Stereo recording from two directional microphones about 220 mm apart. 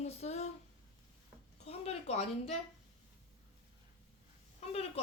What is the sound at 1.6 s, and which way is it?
Speech, 25° left (ahead or behind).